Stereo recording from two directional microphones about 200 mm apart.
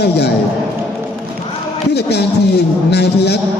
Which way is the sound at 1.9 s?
55° left (ahead or behind).